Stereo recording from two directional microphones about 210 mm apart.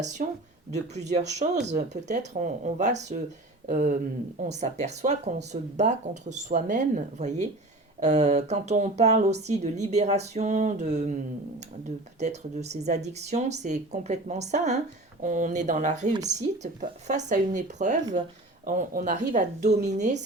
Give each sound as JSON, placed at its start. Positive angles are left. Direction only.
{"t": 0.2, "sound": "speech", "side_deg": -40}
{"t": 12.2, "sound": "speech", "side_deg": -30}